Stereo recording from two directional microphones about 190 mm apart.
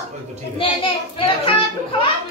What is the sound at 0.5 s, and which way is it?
Speech, 25° left (ahead or behind).